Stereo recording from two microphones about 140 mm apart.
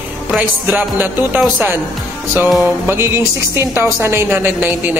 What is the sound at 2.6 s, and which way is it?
A woman's voice, 15° right (ahead or behind).